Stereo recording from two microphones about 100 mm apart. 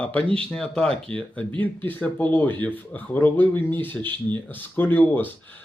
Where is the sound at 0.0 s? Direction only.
15° left (ahead or behind).